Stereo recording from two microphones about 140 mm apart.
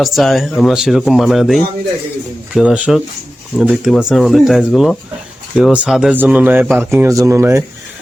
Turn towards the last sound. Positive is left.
turn(degrees=-20)  # may be behind; listen again after turning